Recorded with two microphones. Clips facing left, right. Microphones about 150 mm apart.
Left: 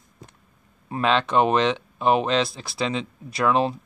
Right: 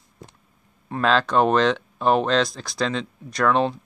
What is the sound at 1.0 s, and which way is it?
Speech, centre (ahead or behind).